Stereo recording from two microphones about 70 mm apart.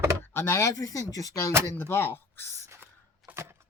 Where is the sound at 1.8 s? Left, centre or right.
Left.